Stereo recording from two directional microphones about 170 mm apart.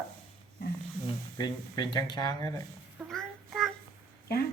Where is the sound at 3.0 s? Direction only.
Centre (ahead or behind).